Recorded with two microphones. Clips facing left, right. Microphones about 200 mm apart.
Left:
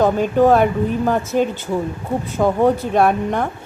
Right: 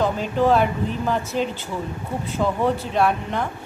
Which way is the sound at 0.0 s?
50° left (ahead or behind).